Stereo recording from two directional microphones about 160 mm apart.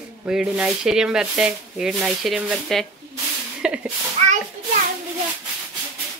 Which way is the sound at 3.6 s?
5° right (ahead or behind).